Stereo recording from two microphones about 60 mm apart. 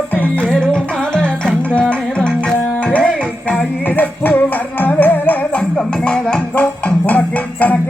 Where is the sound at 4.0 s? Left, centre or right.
Left.